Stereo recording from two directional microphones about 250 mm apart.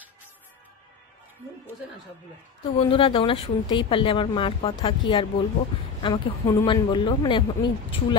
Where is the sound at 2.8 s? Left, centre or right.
Left.